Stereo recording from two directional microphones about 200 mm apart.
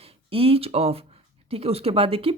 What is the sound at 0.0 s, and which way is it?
A woman's voice, 30° right (ahead or behind).